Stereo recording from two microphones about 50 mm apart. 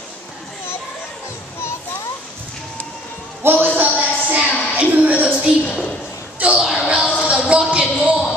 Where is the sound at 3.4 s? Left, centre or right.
Right.